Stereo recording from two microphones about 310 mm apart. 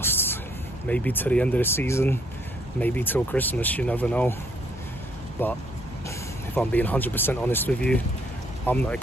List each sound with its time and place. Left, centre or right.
0.0 s a sound: centre
0.8 s speech: centre
5.4 s speech: centre